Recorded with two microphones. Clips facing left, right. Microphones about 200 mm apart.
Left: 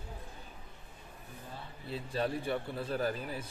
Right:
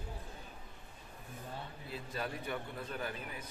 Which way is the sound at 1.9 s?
30° left (ahead or behind).